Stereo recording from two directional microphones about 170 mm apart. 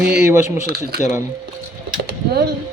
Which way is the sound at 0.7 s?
65° right (ahead or behind).